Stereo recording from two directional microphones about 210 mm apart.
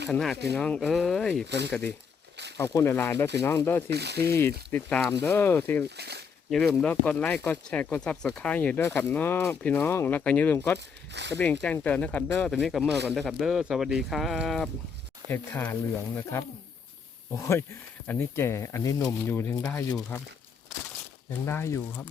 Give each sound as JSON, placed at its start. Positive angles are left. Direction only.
{"t": 0.1, "sound": "speech", "side_deg": 0}
{"t": 1.5, "sound": "speech", "side_deg": -55}
{"t": 2.3, "sound": "a sound", "side_deg": -55}
{"t": 2.6, "sound": "speech", "side_deg": 15}
{"t": 3.8, "sound": "speech", "side_deg": -50}
{"t": 4.3, "sound": "speech", "side_deg": 10}
{"t": 6.0, "sound": "speech", "side_deg": -50}
{"t": 6.5, "sound": "speech", "side_deg": 0}
{"t": 10.8, "sound": "speech", "side_deg": -55}
{"t": 11.6, "sound": "speech", "side_deg": 5}
{"t": 21.4, "sound": "speech", "side_deg": 10}